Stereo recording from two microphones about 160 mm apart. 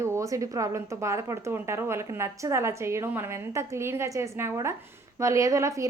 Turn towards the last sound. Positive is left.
turn(degrees=-20)  # may be behind; listen again after turning